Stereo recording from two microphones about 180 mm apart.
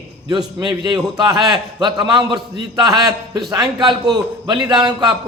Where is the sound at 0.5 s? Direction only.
25° right (ahead or behind).